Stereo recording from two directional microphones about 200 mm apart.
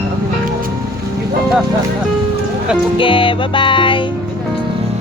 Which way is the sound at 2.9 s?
25° left (ahead or behind).